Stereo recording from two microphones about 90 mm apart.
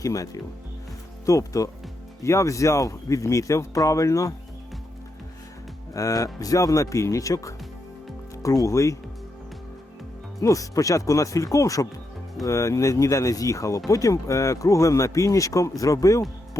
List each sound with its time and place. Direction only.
0.0 s speech: 40° left (ahead or behind)
5.9 s speech: 40° left (ahead or behind)
10.4 s speech: 40° left (ahead or behind)